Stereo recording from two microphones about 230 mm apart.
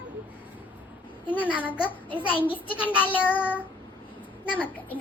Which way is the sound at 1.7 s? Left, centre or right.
Centre.